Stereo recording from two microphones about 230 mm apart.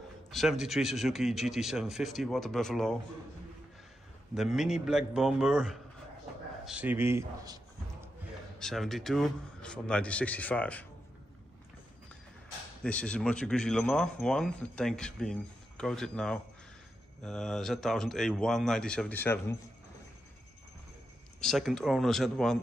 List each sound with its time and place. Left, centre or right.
0.3 s speech: centre
4.4 s speech: centre
6.6 s a sound: centre
8.5 s speech: centre
12.8 s speech: centre
21.4 s speech: centre